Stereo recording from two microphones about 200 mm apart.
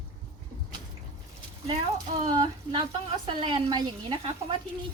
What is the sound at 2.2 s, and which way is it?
A woman's voice, 25° right (ahead or behind).